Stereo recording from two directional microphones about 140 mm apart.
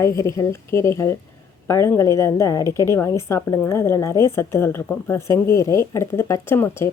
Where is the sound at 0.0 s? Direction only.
20° left (ahead or behind).